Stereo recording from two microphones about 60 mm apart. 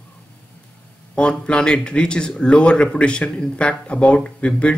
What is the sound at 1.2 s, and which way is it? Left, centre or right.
Speech, centre.